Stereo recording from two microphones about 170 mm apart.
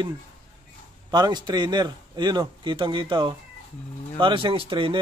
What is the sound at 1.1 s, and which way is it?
A man's voice, 25° right (ahead or behind).